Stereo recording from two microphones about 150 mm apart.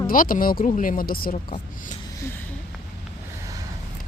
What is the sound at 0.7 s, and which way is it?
Speech, 60° left (ahead or behind).